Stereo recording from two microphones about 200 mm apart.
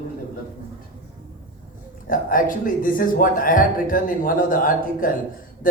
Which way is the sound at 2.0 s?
45° left (ahead or behind).